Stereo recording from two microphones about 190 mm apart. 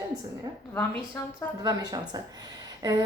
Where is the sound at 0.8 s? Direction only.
10° left (ahead or behind).